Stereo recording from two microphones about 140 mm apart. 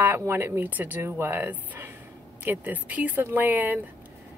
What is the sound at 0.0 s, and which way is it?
A woman's voice, 15° right (ahead or behind).